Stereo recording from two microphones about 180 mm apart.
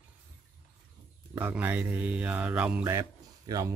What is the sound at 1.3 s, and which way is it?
Speech, 10° right (ahead or behind).